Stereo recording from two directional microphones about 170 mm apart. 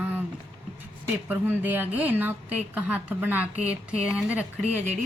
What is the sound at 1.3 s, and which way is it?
Speech, 10° right (ahead or behind).